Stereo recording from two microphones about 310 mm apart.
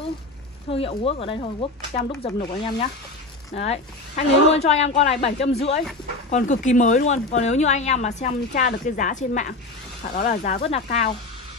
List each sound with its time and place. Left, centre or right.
0.7 s speech: centre